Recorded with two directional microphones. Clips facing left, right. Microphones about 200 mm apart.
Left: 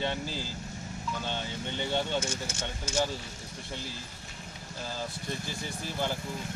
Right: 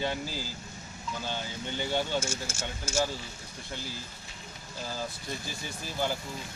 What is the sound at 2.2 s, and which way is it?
Speech, 25° right (ahead or behind).